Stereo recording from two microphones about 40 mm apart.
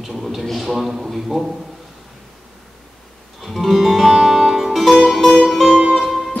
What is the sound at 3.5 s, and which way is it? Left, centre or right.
Music, centre.